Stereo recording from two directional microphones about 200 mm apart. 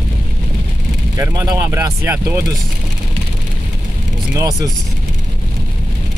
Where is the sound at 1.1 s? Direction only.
15° right (ahead or behind).